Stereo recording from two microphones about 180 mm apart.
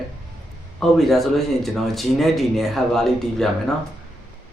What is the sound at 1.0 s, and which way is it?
Speech, centre (ahead or behind).